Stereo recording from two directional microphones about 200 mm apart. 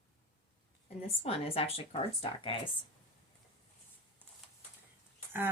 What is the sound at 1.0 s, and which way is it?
Speech, 30° left (ahead or behind).